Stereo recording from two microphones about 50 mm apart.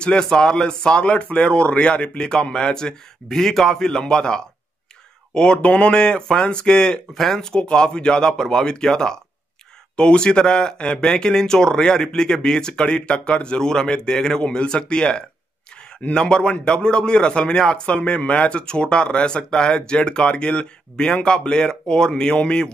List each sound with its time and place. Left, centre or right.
0.0 s a man's voice: centre